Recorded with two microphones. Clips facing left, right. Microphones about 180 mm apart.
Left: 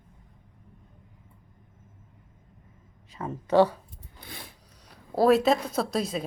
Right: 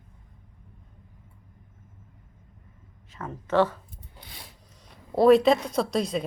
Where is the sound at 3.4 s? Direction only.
15° left (ahead or behind).